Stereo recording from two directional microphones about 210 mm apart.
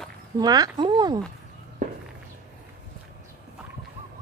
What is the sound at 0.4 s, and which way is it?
Speech, 20° right (ahead or behind).